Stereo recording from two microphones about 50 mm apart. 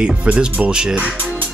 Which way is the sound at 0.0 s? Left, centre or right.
Right.